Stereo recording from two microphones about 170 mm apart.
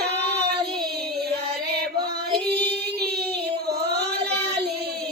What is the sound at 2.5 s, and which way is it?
Child singing, 75° right (ahead or behind).